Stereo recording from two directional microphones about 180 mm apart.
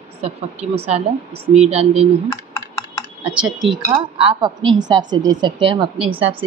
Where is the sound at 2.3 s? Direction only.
20° left (ahead or behind).